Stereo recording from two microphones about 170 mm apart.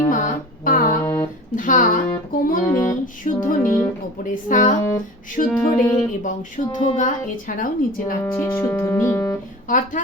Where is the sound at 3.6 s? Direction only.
15° left (ahead or behind).